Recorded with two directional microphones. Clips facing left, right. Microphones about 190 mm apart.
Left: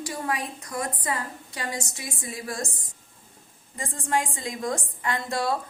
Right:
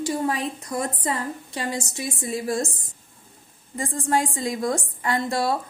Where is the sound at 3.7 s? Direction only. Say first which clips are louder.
Right 4 dB; 35° right (ahead or behind).